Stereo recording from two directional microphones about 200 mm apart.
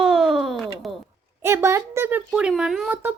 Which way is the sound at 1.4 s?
10° right (ahead or behind).